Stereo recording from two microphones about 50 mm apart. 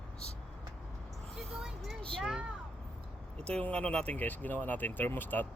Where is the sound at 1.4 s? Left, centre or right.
Centre.